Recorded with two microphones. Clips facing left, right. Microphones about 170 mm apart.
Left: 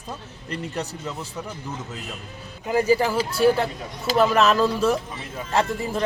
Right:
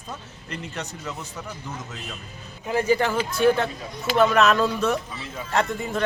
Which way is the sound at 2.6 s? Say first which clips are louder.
Left 2 dB; 10° left (ahead or behind).